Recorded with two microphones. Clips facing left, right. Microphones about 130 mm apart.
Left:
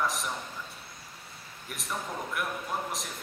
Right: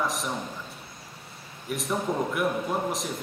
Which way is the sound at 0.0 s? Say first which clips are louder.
Right 2 dB; centre (ahead or behind).